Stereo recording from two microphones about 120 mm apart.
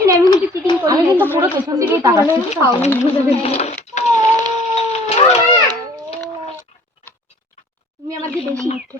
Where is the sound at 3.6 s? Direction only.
70° left (ahead or behind).